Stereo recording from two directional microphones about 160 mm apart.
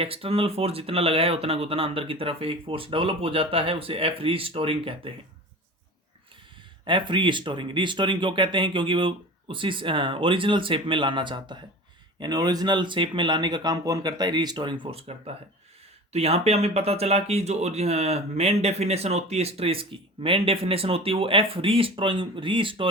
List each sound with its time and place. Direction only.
0.0 s speech: 35° right (ahead or behind)
6.8 s speech: 30° right (ahead or behind)
16.1 s speech: 40° right (ahead or behind)